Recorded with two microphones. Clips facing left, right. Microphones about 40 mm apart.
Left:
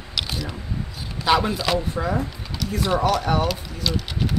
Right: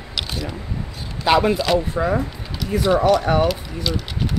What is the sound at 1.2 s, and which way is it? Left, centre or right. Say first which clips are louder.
Speech: right 3 dB; centre.